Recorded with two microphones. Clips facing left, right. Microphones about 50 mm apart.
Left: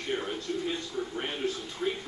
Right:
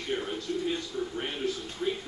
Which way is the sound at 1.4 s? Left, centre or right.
Left.